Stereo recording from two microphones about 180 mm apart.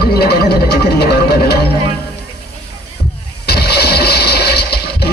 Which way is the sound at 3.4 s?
60° left (ahead or behind).